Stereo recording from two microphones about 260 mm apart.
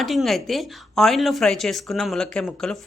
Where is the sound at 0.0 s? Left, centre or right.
Centre.